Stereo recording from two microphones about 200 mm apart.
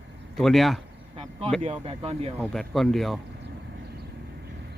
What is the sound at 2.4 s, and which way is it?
Speech, centre (ahead or behind).